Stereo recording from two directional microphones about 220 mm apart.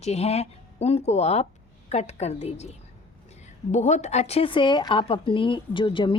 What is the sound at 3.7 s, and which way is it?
Speech, 30° left (ahead or behind).